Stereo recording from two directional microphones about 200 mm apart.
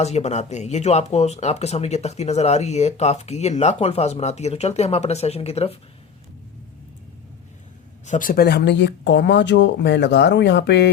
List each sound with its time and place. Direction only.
0.0 s speech: 35° left (ahead or behind)
8.0 s speech: 40° left (ahead or behind); by 10.8 s 60° left (ahead or behind)